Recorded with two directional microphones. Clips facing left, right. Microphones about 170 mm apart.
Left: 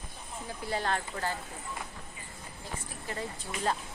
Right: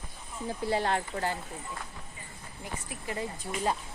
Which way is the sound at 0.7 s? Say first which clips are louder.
Right 3 dB; 25° right (ahead or behind).